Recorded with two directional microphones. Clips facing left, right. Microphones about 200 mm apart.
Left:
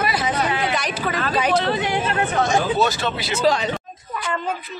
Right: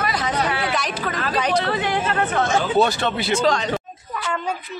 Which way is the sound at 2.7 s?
55° right (ahead or behind).